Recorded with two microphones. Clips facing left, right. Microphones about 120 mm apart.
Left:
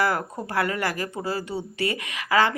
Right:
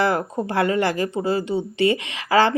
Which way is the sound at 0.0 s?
25° right (ahead or behind).